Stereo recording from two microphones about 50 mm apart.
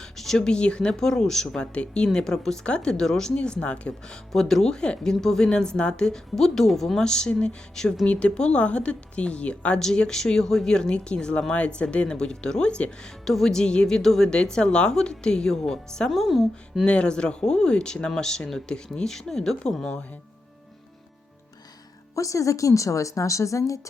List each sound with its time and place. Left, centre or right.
0.0 s speech: centre
1.7 s speech: left
4.3 s speech: centre
13.2 s speech: centre
16.0 s speech: centre
16.8 s speech: left
22.1 s a woman's voice: left